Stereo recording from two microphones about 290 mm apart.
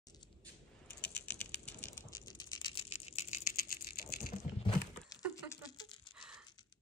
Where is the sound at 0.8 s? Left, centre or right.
Centre.